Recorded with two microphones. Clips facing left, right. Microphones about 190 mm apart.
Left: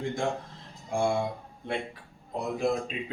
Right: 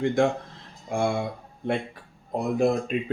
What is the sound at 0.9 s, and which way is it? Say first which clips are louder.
Speech: right 2 dB; 65° right (ahead or behind).